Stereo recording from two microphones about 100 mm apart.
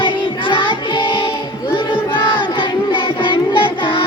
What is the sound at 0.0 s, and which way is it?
Music, 55° left (ahead or behind).